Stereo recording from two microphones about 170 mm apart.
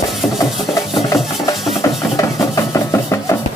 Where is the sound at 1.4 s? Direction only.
20° left (ahead or behind).